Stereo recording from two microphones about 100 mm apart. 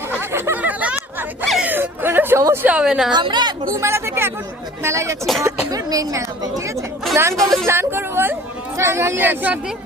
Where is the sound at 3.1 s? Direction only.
45° right (ahead or behind).